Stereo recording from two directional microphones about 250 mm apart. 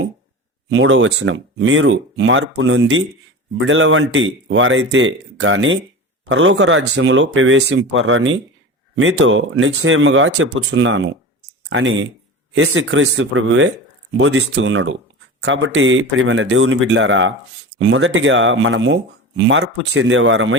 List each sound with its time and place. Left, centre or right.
0.7 s speech: right